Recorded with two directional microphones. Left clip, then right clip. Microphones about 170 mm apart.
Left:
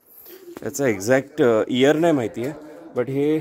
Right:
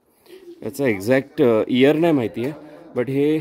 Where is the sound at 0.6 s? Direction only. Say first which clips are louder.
Right 1 dB; 10° right (ahead or behind).